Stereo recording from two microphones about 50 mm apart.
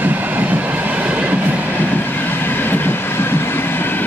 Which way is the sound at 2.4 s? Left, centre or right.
Left.